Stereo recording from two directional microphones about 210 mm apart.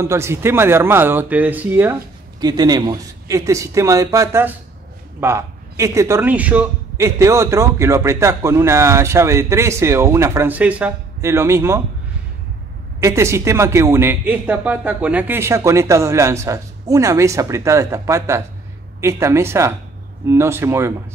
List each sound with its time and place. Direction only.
0.0 s a man's voice: 10° right (ahead or behind)
13.0 s a man's voice: 15° right (ahead or behind)